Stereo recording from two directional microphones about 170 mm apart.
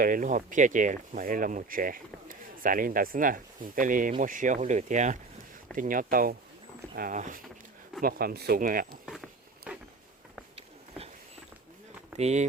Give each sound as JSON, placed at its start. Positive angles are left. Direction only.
{"t": 0.0, "sound": "speech", "side_deg": -50}
{"t": 8.0, "sound": "speech", "side_deg": -65}
{"t": 9.0, "sound": "walk", "side_deg": 0}
{"t": 10.5, "sound": "a sound", "side_deg": -35}
{"t": 12.1, "sound": "speech", "side_deg": -40}